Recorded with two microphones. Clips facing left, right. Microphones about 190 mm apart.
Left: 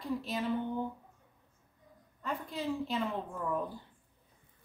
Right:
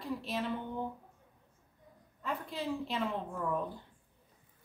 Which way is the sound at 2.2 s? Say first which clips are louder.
Left 1 dB; centre (ahead or behind).